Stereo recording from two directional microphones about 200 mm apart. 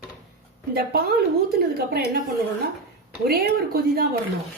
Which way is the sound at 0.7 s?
50° right (ahead or behind).